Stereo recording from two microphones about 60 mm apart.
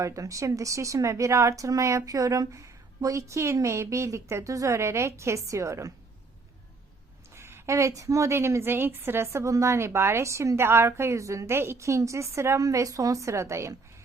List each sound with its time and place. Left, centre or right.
0.0 s speech: right
7.3 s a sound: right
7.8 s speech: right
8.3 s a woman's voice: right
12.5 s speech: right